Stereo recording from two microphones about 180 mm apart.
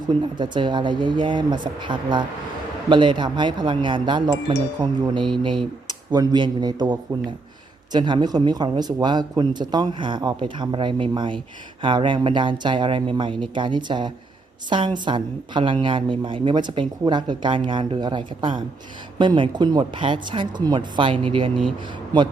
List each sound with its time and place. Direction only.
0.1 s speech: 25° right (ahead or behind)